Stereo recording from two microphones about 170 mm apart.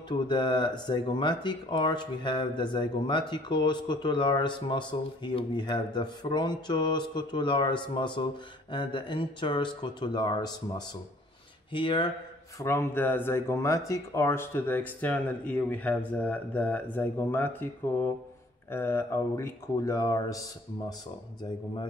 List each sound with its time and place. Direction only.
0.3 s speech: 25° left (ahead or behind)
12.5 s speech: 15° left (ahead or behind)
18.7 s speech: 15° left (ahead or behind)